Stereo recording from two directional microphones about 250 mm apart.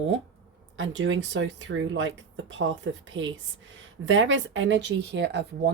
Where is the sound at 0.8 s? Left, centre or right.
Right.